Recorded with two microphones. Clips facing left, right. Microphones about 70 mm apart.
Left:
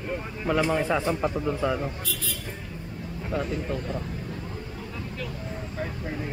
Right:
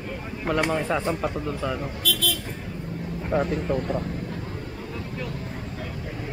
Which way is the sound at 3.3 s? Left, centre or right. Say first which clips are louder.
Right 5 dB; right.